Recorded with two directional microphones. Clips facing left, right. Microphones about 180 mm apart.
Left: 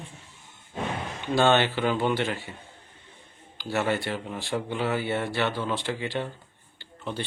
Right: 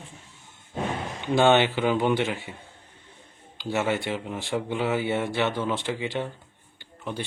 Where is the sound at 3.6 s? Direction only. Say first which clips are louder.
Right 1 dB; 20° right (ahead or behind).